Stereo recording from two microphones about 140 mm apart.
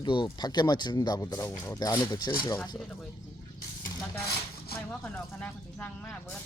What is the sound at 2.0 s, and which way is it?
Speech, 35° left (ahead or behind).